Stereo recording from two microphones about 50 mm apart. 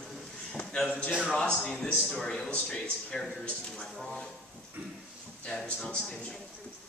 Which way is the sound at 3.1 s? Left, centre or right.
Centre.